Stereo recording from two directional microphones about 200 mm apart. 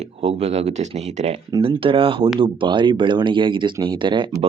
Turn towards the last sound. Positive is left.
turn(degrees=-25)  # may be behind; listen again after turning